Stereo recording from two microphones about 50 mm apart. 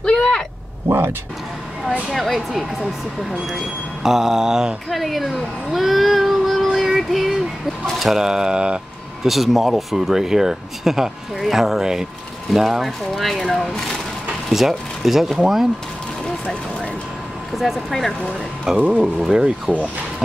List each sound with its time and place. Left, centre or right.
0.0 s vehicle: left
0.8 s speech: right
2.0 s speech: centre
9.2 s speech: centre
14.5 s speech: centre
17.6 s speech: centre
18.8 s speech: right
19.3 s speech: centre